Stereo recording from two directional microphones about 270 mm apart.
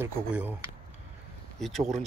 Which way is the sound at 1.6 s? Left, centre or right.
Centre.